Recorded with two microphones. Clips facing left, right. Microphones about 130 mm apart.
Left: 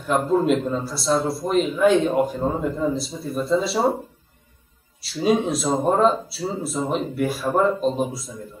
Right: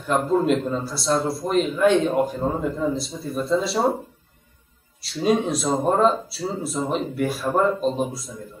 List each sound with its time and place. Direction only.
0.0 s a man's voice: centre (ahead or behind)
5.0 s a man's voice: centre (ahead or behind)